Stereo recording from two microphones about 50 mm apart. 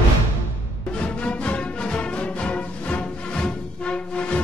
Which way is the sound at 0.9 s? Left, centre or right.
Left.